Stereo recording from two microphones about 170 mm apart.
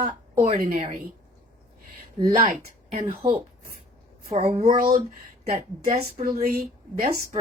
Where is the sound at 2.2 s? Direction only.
40° right (ahead or behind).